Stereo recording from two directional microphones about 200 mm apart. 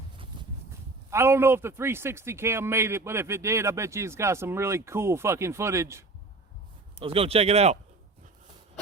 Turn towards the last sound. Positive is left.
turn(degrees=-30)  # may be behind; listen again after turning